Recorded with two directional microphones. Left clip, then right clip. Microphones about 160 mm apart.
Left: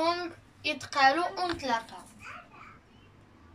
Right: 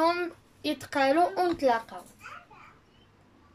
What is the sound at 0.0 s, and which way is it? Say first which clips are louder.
A child's voice: right 3 dB; 50° right (ahead or behind).